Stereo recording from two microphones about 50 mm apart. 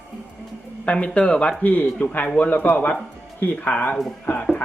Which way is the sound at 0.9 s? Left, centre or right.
Left.